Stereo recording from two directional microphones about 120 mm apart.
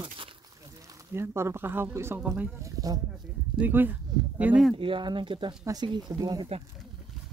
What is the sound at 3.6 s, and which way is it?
Speech, 15° right (ahead or behind).